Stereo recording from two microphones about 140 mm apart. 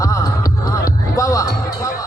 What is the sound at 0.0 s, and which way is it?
Music, 25° left (ahead or behind).